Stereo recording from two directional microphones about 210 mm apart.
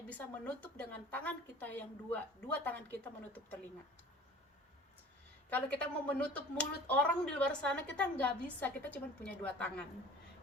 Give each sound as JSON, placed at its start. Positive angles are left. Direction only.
{"t": 0.1, "sound": "speech", "side_deg": 5}
{"t": 5.5, "sound": "speech", "side_deg": 5}